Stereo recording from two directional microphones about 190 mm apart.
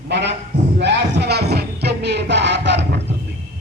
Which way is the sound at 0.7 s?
65° right (ahead or behind).